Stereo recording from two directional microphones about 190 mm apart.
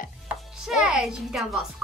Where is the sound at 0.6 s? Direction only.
Centre (ahead or behind).